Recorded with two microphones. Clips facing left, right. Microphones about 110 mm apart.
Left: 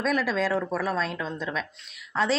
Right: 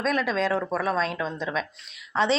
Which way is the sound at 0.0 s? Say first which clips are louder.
Even; 10° left (ahead or behind).